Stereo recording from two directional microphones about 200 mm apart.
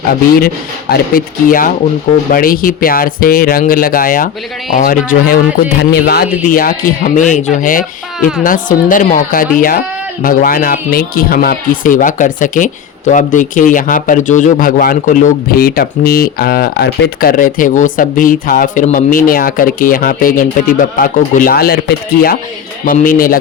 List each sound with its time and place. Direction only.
0.1 s speech: 50° left (ahead or behind)